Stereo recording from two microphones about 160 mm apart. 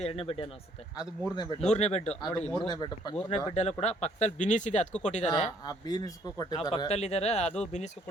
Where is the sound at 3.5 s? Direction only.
40° left (ahead or behind).